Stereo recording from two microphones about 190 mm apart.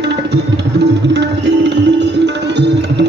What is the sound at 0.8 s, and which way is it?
Tabla, 65° right (ahead or behind).